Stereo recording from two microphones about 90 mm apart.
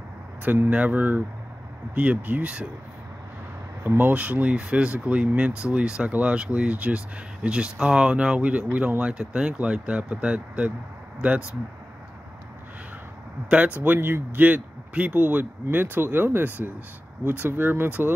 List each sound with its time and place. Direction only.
0.4 s speech: 20° right (ahead or behind)
3.8 s speech: 20° right (ahead or behind)
13.7 s speech: 20° right (ahead or behind)